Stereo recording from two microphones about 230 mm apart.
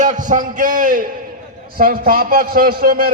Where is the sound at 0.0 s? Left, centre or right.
Right.